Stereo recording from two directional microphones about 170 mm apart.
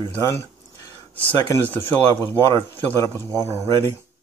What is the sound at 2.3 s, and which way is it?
Speech, 15° left (ahead or behind).